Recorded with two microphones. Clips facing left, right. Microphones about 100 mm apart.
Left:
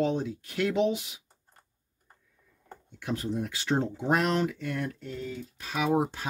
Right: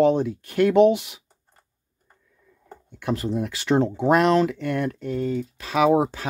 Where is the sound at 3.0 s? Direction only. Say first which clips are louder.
Right 6 dB; 70° right (ahead or behind); by 6.2 s 90° right.